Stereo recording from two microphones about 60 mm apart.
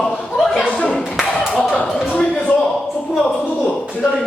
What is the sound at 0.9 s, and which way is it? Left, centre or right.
Clapping, centre.